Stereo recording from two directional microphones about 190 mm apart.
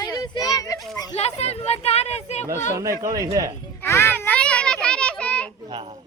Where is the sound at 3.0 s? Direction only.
15° right (ahead or behind).